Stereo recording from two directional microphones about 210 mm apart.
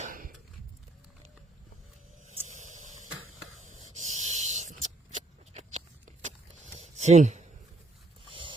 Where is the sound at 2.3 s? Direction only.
35° right (ahead or behind).